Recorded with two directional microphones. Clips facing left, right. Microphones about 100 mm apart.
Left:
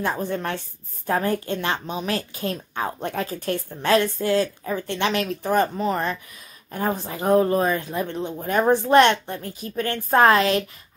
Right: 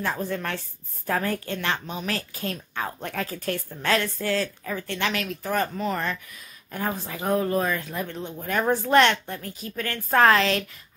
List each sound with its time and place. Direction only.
0.0 s a woman's voice: 20° left (ahead or behind)